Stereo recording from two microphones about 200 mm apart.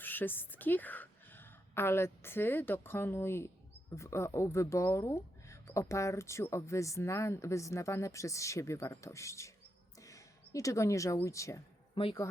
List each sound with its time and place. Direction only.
0.0 s a woman's voice: 10° left (ahead or behind)